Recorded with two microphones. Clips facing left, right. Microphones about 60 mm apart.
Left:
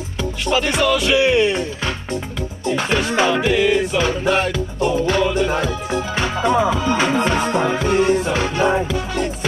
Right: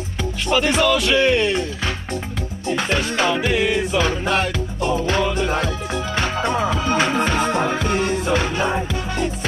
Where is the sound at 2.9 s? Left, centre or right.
Centre.